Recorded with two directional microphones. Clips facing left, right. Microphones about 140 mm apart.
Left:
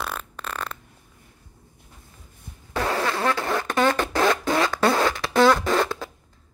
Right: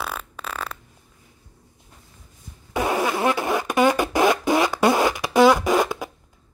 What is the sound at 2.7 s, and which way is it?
Fart, 15° right (ahead or behind).